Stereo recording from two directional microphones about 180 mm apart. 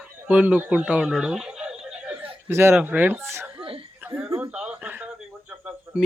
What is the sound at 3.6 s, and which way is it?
Chuckle, 30° right (ahead or behind).